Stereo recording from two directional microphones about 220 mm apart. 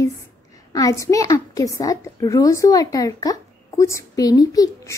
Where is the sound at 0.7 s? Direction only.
15° left (ahead or behind).